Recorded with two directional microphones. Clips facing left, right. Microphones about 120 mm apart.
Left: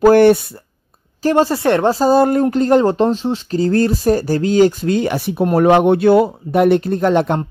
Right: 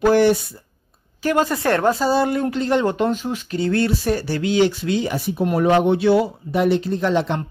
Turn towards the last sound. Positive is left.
turn(degrees=50)  # may be behind; listen again after turning